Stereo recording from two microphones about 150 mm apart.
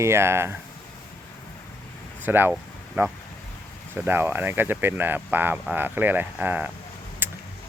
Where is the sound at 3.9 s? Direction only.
15° right (ahead or behind).